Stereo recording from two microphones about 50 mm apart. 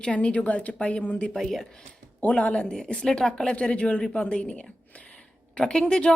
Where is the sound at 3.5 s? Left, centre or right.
Left.